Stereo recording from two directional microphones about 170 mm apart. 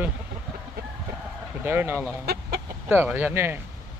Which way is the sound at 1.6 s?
15° right (ahead or behind).